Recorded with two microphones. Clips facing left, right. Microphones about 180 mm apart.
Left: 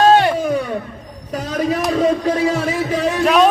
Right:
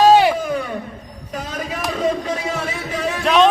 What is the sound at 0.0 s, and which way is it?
Music, 5° right (ahead or behind).